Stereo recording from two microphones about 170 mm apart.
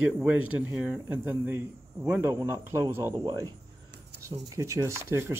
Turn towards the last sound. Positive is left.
turn(degrees=-15)  # may be behind; listen again after turning